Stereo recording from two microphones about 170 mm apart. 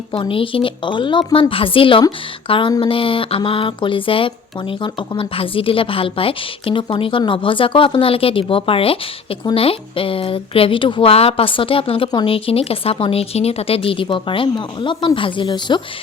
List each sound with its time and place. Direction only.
0.1 s speech: 30° left (ahead or behind)